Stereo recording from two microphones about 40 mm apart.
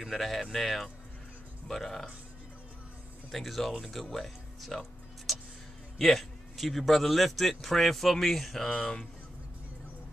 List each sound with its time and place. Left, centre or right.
0.2 s speech: centre
3.3 s speech: centre
5.3 s music: centre
5.9 s a man's voice: centre
6.5 s speech: centre
8.7 s speech: left